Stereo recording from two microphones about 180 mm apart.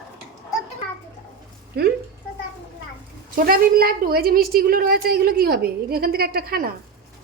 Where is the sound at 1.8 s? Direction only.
65° right (ahead or behind).